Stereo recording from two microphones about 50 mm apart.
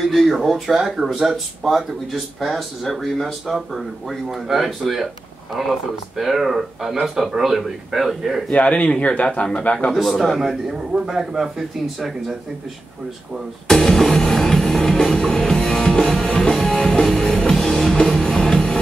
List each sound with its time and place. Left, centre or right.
0.1 s speech: centre
8.5 s speech: left
9.9 s speech: centre
13.7 s music: centre